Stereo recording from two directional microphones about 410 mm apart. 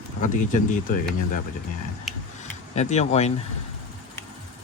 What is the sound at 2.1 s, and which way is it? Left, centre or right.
Tick-tock, centre.